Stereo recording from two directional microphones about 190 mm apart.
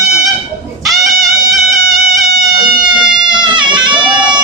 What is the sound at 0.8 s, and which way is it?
Music, centre (ahead or behind).